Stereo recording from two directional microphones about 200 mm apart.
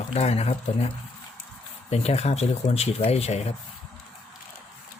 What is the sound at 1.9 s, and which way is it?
Speech, 30° left (ahead or behind).